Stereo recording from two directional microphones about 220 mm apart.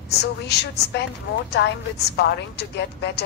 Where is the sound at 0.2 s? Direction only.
50° left (ahead or behind).